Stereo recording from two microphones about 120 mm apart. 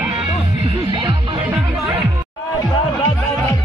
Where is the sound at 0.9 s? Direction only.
45° right (ahead or behind).